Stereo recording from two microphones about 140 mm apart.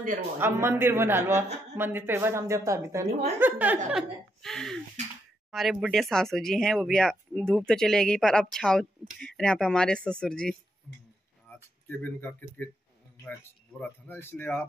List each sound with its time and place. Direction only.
0.4 s a man's voice: 15° right (ahead or behind)
4.4 s speech: 5° left (ahead or behind)
11.5 s a sound: 15° left (ahead or behind)
12.0 s speech: 15° left (ahead or behind)
13.7 s speech: 15° left (ahead or behind)